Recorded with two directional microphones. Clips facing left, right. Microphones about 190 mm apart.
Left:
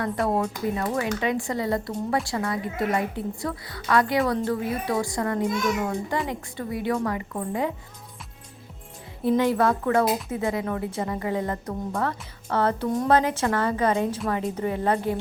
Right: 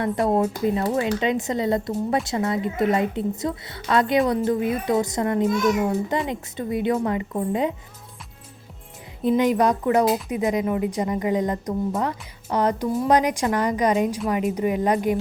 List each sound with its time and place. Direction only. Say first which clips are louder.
0.0 s a woman's voice: right 4 dB; 20° right (ahead or behind)
9.4 s a woman's voice: right 3 dB; 15° right (ahead or behind)